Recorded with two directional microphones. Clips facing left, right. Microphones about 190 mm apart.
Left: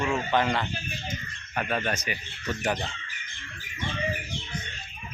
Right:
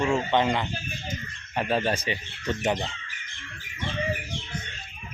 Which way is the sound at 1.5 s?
30° right (ahead or behind).